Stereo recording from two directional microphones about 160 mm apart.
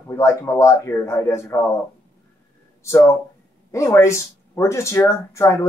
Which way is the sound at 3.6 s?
20° left (ahead or behind).